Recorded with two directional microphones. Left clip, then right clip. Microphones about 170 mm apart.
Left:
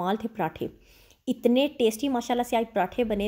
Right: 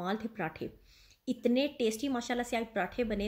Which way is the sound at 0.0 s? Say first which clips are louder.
Left 8 dB; 25° left (ahead or behind).